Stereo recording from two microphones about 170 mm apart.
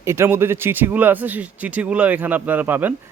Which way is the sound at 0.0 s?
15° right (ahead or behind).